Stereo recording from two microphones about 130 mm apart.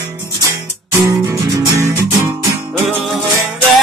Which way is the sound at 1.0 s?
25° right (ahead or behind).